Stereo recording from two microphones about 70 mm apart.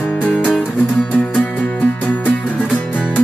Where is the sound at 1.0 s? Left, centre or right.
Centre.